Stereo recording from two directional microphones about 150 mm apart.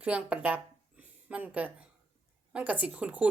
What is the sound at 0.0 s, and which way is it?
Speech, 10° right (ahead or behind).